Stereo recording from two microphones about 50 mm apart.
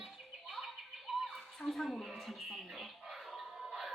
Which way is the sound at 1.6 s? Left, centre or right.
Centre.